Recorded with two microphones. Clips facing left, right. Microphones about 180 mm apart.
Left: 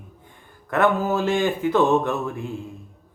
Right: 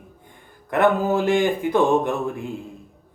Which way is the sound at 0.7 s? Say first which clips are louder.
Right 2 dB; 15° right (ahead or behind).